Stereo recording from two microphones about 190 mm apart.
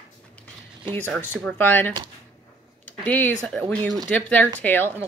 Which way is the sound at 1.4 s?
10° left (ahead or behind).